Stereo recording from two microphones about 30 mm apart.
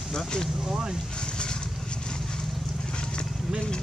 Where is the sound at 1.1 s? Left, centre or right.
Left.